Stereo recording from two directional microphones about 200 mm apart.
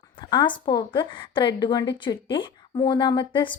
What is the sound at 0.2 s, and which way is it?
Speech, 20° left (ahead or behind).